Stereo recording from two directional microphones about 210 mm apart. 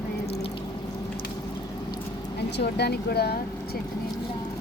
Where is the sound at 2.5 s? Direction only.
50° left (ahead or behind).